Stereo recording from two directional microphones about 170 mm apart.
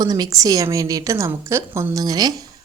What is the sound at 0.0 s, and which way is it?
A woman's voice, 20° right (ahead or behind).